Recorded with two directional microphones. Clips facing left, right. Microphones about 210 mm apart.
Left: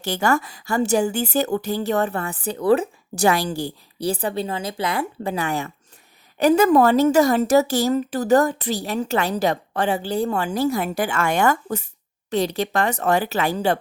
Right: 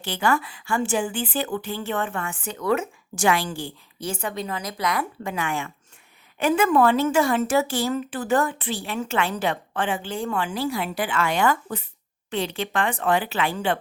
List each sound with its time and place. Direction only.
0.0 s a woman's voice: 45° left (ahead or behind)